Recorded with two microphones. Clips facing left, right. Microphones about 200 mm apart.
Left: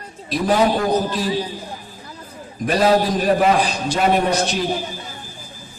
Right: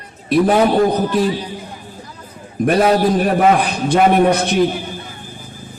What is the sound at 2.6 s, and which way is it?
A man's voice, 55° right (ahead or behind).